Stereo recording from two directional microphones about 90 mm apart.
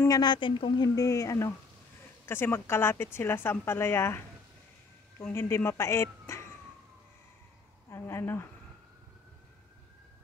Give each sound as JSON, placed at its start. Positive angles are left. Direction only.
{"t": 0.1, "sound": "speech", "side_deg": 55}
{"t": 0.8, "sound": "speech", "side_deg": 40}
{"t": 2.2, "sound": "a woman's voice", "side_deg": 25}
{"t": 5.2, "sound": "a woman's voice", "side_deg": 25}
{"t": 7.9, "sound": "a woman's voice", "side_deg": 25}